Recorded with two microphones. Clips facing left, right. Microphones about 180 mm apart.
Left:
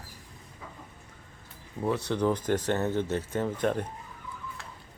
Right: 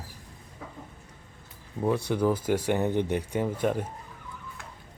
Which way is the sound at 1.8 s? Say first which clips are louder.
Right 2 dB; 10° right (ahead or behind).